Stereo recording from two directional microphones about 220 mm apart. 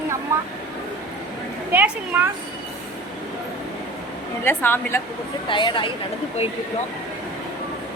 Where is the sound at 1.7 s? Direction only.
10° right (ahead or behind).